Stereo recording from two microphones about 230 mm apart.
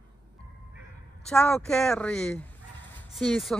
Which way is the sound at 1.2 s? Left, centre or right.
Centre.